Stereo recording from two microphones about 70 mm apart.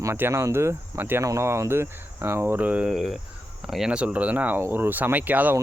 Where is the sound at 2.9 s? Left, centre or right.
Centre.